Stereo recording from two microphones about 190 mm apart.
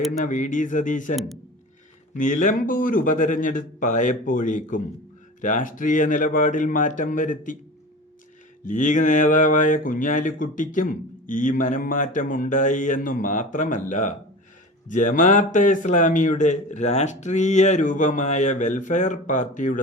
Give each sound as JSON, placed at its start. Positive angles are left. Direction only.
{"t": 0.1, "sound": "speech", "side_deg": 40}
{"t": 2.1, "sound": "a man's voice", "side_deg": 40}
{"t": 8.6, "sound": "a man's voice", "side_deg": 40}